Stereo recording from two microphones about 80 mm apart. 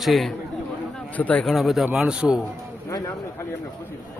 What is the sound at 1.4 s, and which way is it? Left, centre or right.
Speech, centre.